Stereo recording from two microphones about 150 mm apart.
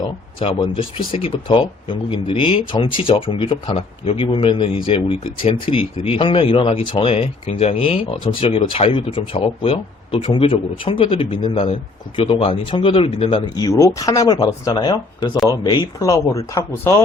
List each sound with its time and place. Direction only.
0.0 s speech: 30° left (ahead or behind)